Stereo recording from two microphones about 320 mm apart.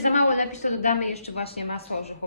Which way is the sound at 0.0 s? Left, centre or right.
Left.